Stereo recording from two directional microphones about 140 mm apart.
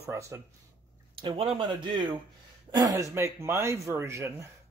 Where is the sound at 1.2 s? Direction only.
35° right (ahead or behind).